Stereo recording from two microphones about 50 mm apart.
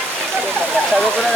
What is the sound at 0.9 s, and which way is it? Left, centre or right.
Speech, centre.